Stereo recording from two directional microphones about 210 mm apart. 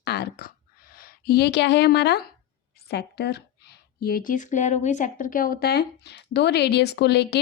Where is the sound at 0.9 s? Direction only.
45° left (ahead or behind).